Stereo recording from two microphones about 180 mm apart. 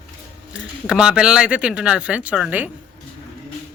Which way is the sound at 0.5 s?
5° right (ahead or behind).